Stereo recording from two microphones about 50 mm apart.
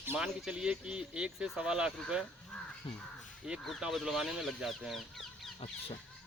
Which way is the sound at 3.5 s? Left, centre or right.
Centre.